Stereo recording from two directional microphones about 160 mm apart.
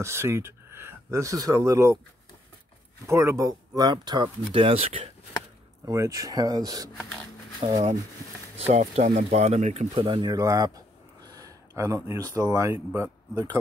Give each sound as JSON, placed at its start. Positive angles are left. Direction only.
{"t": 0.0, "sound": "speech", "side_deg": -15}
{"t": 3.1, "sound": "speech", "side_deg": -15}
{"t": 5.9, "sound": "speech", "side_deg": -20}
{"t": 7.6, "sound": "speech", "side_deg": -40}
{"t": 10.3, "sound": "speech", "side_deg": -20}